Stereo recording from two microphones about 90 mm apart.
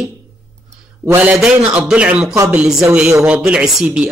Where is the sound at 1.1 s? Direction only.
15° right (ahead or behind).